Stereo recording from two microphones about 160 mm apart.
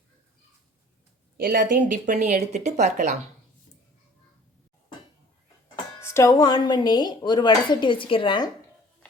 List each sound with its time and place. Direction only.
1.4 s speech: 60° right (ahead or behind)
6.0 s speech: 15° left (ahead or behind)